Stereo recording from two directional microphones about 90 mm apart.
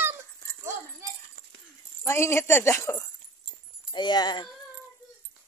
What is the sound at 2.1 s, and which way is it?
Speech, 30° left (ahead or behind).